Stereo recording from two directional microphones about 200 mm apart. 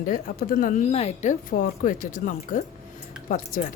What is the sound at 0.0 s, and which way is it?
Speech, 45° left (ahead or behind).